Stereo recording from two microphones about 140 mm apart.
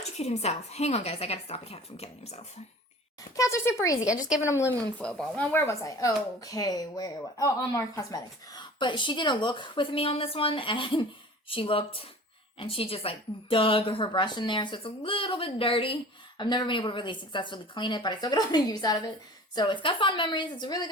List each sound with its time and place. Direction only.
0.0 s a woman's voice: 50° left (ahead or behind)
3.3 s speech: 20° left (ahead or behind)
4.1 s a woman's voice: 10° right (ahead or behind)
4.4 s speech: 20° left (ahead or behind)
4.9 s speech: 10° left (ahead or behind); by 20.9 s 30° left (ahead or behind)